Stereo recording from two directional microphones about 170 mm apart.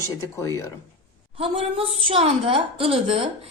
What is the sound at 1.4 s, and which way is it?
A woman's voice, 35° right (ahead or behind).